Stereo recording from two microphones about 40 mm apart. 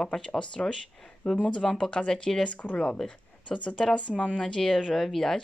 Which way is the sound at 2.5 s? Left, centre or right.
Left.